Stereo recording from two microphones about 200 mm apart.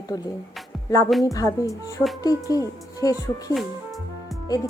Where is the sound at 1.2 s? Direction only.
15° left (ahead or behind).